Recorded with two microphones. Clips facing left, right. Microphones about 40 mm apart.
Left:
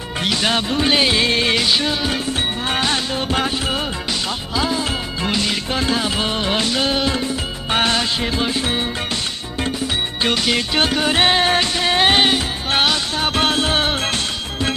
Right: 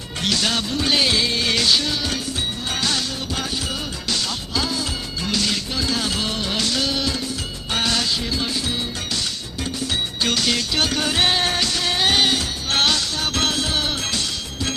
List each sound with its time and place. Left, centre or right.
0.2 s music: left
1.2 s music: left
1.5 s music: left
5.7 s music: left
6.0 s music: left
10.2 s music: left